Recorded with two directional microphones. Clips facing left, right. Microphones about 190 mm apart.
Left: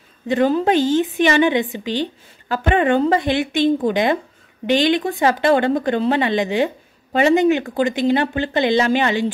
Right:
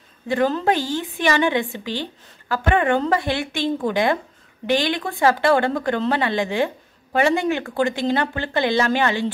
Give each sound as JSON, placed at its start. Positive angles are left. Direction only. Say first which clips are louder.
{"t": 0.3, "sound": "speech", "louder": "left 3 dB", "side_deg": 15}